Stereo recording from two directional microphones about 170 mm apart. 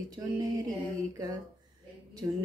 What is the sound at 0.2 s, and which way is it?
Mantra, 20° right (ahead or behind).